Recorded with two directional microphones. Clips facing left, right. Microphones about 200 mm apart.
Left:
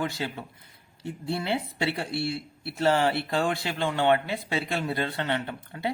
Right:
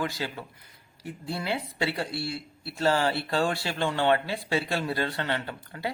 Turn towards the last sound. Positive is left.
turn(degrees=20)  # may be behind; listen again after turning